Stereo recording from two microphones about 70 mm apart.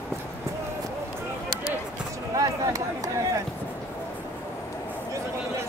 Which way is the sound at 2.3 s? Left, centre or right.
Right.